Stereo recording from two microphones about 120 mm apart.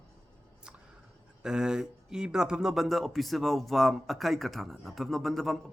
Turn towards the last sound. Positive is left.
turn(degrees=0)  # may be behind; listen again after turning